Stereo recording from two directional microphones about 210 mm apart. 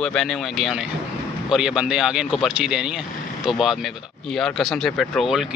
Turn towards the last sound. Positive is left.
turn(degrees=0)  # may be behind; listen again after turning